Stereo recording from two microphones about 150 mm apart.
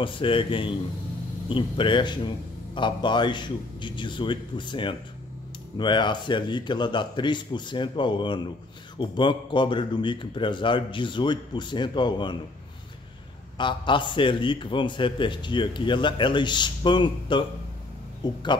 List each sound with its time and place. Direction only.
0.0 s a man's voice: 35° left (ahead or behind)
13.6 s a man's voice: 30° left (ahead or behind)